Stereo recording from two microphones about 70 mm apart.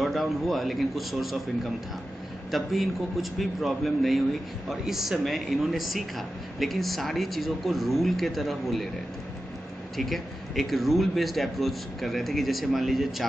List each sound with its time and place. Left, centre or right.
0.0 s speech: centre
9.9 s speech: centre